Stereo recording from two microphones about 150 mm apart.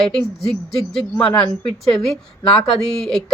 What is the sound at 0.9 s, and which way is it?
Speech, 5° left (ahead or behind).